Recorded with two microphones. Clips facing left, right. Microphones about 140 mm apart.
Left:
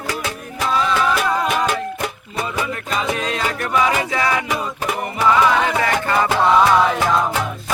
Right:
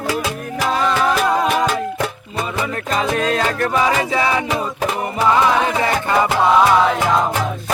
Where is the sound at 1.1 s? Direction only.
Centre (ahead or behind).